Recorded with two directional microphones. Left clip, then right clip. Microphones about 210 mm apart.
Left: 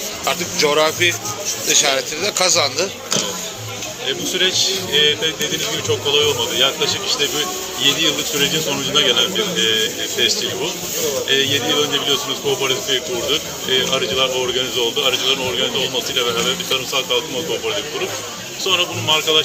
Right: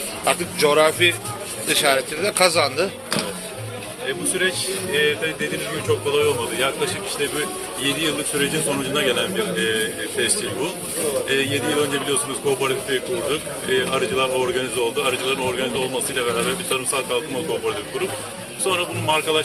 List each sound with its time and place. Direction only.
0.3 s a man's voice: 10° right (ahead or behind)
4.4 s speech: centre (ahead or behind)
7.9 s a man's voice: 10° right (ahead or behind)
13.7 s a man's voice: 5° right (ahead or behind)
18.6 s a man's voice: 5° right (ahead or behind)